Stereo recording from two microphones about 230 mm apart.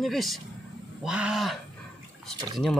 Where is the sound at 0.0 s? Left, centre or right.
Centre.